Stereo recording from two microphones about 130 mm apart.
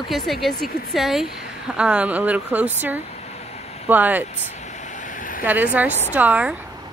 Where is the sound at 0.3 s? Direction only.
Centre (ahead or behind).